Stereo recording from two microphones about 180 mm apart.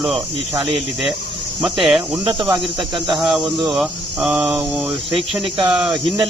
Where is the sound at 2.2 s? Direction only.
25° right (ahead or behind).